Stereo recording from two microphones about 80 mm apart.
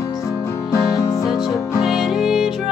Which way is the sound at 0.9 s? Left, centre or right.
Left.